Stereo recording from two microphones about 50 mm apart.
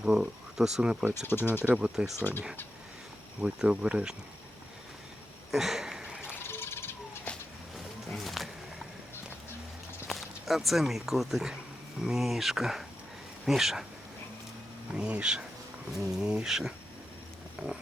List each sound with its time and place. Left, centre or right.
0.0 s speech: centre
1.2 s speech: left
1.7 s speech: centre
3.4 s speech: centre
5.5 s a sound: centre
6.4 s a sound: left
8.1 s music: centre
10.1 s speech: centre
14.9 s speech: centre
17.6 s speech: right